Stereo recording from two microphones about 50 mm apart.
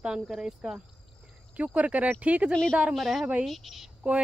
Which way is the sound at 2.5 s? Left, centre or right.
Centre.